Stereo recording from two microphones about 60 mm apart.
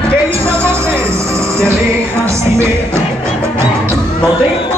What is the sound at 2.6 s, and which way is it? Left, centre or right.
Music, right.